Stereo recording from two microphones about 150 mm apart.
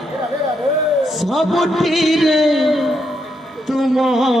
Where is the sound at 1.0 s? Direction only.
Centre (ahead or behind).